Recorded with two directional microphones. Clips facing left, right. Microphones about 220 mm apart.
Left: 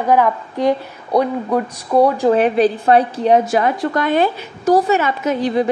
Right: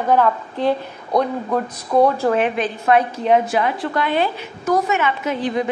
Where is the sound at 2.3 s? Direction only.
35° left (ahead or behind).